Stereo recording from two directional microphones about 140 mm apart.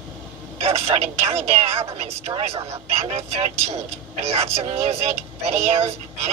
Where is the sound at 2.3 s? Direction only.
30° right (ahead or behind).